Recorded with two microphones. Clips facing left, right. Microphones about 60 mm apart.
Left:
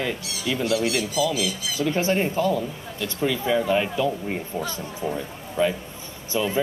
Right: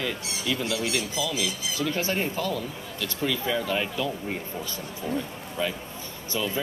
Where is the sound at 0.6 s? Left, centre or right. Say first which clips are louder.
Left 5 dB; left; by 4.1 s centre.